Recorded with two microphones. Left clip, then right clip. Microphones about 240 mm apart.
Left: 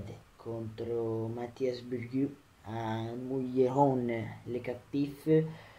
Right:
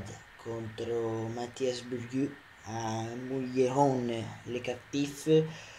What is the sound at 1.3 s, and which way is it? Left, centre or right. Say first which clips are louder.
Speech: right 1 dB; centre.